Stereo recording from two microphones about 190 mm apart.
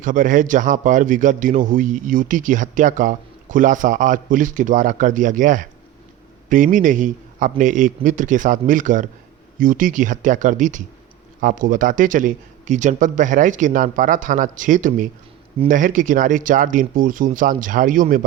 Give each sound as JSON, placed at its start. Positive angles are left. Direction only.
{"t": 0.0, "sound": "a man's voice", "side_deg": -45}